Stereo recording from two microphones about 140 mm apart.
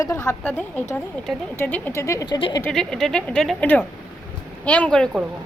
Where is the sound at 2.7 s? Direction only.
5° left (ahead or behind).